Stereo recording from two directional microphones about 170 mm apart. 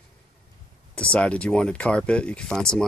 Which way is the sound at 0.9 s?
5° left (ahead or behind).